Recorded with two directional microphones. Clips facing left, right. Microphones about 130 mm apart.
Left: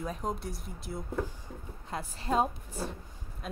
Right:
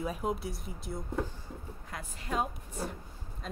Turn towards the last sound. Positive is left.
turn(degrees=5)  # may be behind; listen again after turning